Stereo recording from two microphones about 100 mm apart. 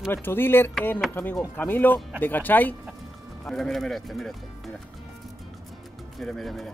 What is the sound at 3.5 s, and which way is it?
Speech, 5° left (ahead or behind).